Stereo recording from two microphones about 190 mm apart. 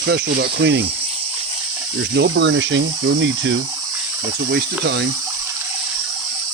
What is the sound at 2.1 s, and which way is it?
Speech, 70° right (ahead or behind).